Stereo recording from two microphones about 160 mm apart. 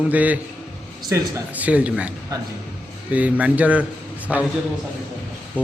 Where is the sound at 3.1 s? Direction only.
10° right (ahead or behind).